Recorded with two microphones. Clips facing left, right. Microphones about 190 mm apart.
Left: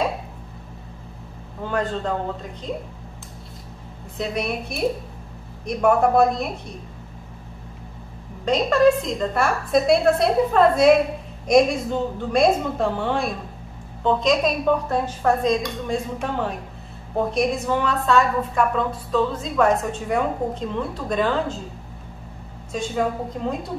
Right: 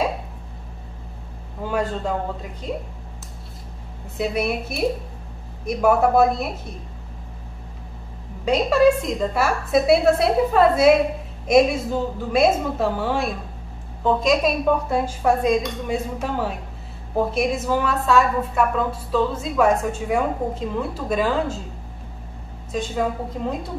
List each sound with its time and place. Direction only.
1.6 s a man's voice: 10° right (ahead or behind)
4.2 s a woman's voice: 5° right (ahead or behind)
8.5 s a woman's voice: 5° right (ahead or behind)
22.7 s a woman's voice: centre (ahead or behind)